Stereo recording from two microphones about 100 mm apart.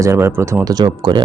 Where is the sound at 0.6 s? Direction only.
40° right (ahead or behind).